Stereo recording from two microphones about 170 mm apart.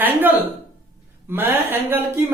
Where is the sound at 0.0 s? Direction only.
10° right (ahead or behind).